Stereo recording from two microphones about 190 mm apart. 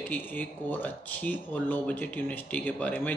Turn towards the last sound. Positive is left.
turn(degrees=10)  # may be behind; listen again after turning